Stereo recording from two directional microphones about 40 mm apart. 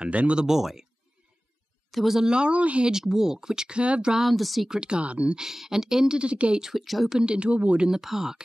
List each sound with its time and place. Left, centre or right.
0.0 s speech: right
0.4 s speech: centre
1.9 s speech: centre
2.2 s speech: right
2.9 s speech: centre; by 4.1 s right
4.1 s a woman's voice: centre
4.6 s speech: right
5.0 s speech: right
5.3 s speech: centre
6.1 s speech: right
6.6 s a woman's voice: centre
7.1 s speech: right
7.9 s speech: centre